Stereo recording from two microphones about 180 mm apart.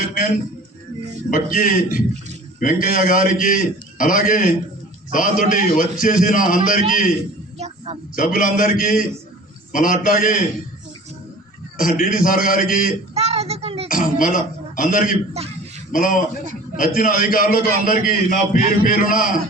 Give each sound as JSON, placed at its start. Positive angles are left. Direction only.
{"t": 0.0, "sound": "a sound", "side_deg": 55}
{"t": 1.3, "sound": "a man's voice", "side_deg": 50}
{"t": 11.8, "sound": "a man's voice", "side_deg": 50}
{"t": 13.1, "sound": "child singing", "side_deg": -35}
{"t": 13.8, "sound": "a man's voice", "side_deg": 50}
{"t": 15.3, "sound": "a sound", "side_deg": -35}
{"t": 15.9, "sound": "a man's voice", "side_deg": 50}